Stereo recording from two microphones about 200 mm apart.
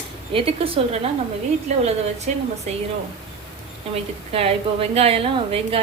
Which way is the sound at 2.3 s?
35° right (ahead or behind).